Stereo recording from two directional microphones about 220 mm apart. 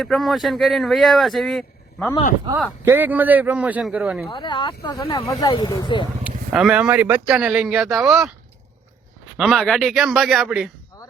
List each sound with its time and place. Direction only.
0.0 s speech: centre (ahead or behind)
2.8 s a man's voice: 10° right (ahead or behind)
4.3 s speech: 20° left (ahead or behind)
6.2 s speech: 5° right (ahead or behind)
9.4 s speech: centre (ahead or behind)